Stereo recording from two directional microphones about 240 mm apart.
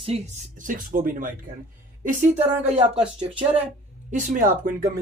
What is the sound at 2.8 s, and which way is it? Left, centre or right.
Speech, centre.